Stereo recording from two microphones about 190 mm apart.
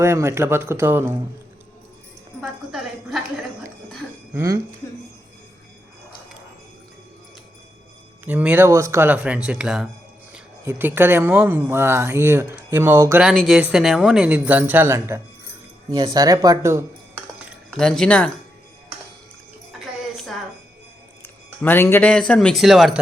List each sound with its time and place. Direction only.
0.0 s speech: 15° right (ahead or behind)
2.4 s a sound: centre (ahead or behind)
4.4 s speech: 15° right (ahead or behind)
8.2 s speech: 10° right (ahead or behind)
13.2 s speech: centre (ahead or behind); by 16.8 s 15° right (ahead or behind)
17.7 s speech: 5° left (ahead or behind)
21.2 s speech: 10° left (ahead or behind)